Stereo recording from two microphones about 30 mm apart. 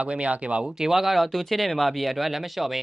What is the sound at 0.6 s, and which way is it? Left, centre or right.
Speech, centre.